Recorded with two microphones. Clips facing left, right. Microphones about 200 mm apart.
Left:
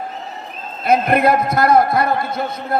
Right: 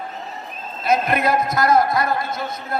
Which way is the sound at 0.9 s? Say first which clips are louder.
Left 4 dB; 55° left (ahead or behind).